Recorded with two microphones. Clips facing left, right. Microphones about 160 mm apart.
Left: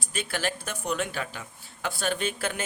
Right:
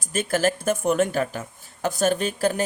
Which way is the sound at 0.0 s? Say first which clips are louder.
Right 9 dB; 45° right (ahead or behind).